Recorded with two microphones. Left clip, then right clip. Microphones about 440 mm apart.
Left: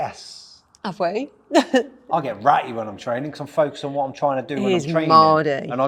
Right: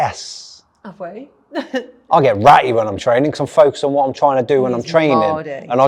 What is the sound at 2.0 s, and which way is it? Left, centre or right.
A man's voice, right.